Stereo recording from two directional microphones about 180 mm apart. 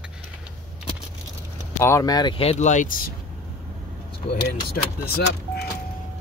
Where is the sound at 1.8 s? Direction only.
15° left (ahead or behind); by 3.0 s 45° left (ahead or behind).